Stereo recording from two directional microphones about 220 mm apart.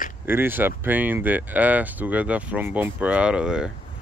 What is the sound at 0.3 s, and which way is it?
Speech, 10° right (ahead or behind).